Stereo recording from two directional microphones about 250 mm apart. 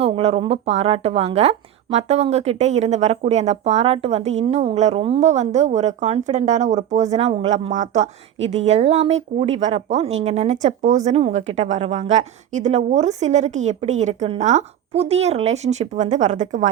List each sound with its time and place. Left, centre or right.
0.0 s a woman's voice: right